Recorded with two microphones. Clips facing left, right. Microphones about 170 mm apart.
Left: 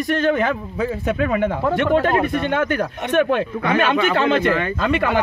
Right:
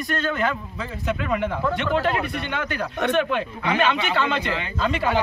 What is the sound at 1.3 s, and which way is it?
Speech, 55° left (ahead or behind).